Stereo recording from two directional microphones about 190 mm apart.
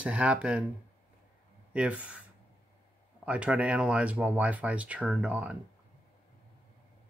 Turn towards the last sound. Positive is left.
turn(degrees=-5)  # may be behind; listen again after turning